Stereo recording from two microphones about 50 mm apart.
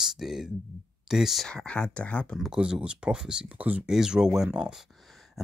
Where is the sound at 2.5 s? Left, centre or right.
Centre.